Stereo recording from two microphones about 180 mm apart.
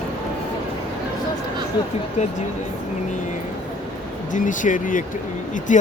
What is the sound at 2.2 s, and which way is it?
Speech, 40° left (ahead or behind).